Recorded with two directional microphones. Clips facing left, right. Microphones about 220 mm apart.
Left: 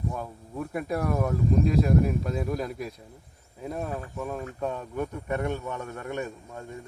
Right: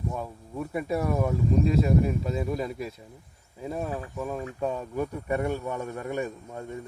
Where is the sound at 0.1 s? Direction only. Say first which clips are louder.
Right 1 dB; 5° right (ahead or behind).